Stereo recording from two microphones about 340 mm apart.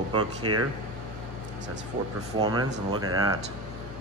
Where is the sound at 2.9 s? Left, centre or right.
Right.